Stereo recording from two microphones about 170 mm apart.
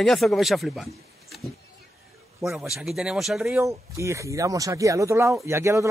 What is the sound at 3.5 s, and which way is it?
Speech, 15° right (ahead or behind).